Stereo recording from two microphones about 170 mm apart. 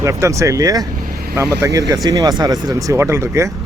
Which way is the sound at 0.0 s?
20° right (ahead or behind).